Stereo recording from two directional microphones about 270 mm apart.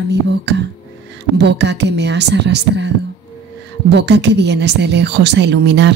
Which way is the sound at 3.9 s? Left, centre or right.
Right.